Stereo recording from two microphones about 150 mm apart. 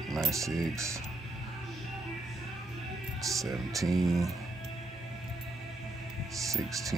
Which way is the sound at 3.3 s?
Centre (ahead or behind).